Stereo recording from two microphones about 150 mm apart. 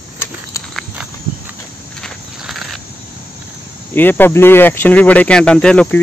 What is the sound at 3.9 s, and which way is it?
Speech, 15° left (ahead or behind).